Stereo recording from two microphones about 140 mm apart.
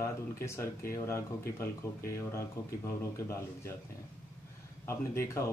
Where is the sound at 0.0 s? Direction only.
20° left (ahead or behind).